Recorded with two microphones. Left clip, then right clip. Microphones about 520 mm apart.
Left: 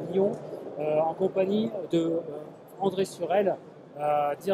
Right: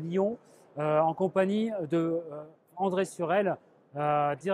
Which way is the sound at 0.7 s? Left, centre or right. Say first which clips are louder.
Even; right.